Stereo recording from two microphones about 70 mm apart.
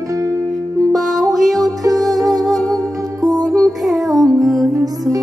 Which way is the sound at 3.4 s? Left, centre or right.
Centre.